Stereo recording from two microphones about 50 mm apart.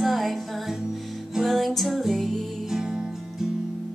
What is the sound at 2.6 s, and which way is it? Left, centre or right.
Music, centre.